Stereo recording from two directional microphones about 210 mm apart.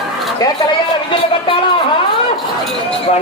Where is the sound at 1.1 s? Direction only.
25° left (ahead or behind).